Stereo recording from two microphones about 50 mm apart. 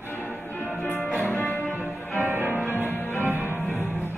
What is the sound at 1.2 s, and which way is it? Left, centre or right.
Music, left.